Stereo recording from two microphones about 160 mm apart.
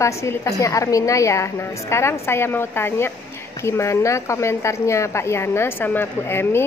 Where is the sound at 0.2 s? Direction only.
20° left (ahead or behind).